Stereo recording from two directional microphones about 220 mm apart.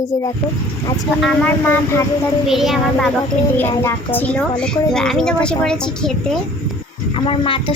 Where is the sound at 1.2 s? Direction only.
5° left (ahead or behind).